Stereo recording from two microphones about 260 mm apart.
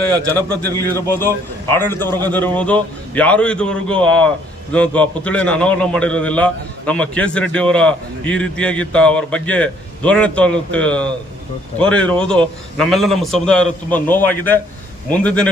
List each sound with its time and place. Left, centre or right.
0.0 s a man's voice: centre